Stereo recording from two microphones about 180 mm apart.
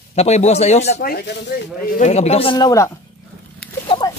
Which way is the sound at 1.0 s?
60° left (ahead or behind).